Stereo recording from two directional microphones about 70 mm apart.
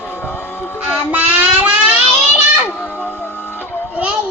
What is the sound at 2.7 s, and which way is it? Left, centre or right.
Music, left.